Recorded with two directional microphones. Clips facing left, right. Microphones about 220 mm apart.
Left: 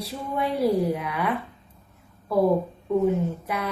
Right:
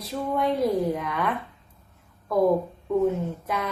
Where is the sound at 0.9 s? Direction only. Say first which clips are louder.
Even; 5° left (ahead or behind).